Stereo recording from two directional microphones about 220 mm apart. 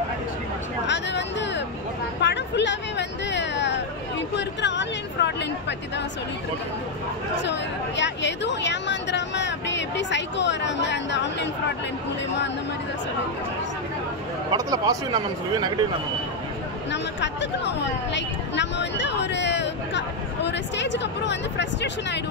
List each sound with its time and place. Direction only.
0.8 s a sound: 50° left (ahead or behind)
2.2 s hubbub: 50° left (ahead or behind)
4.4 s chatter: 55° left (ahead or behind)
7.4 s a sound: 55° left (ahead or behind)
14.5 s speech: 15° right (ahead or behind)
16.9 s a woman's voice: 55° left (ahead or behind)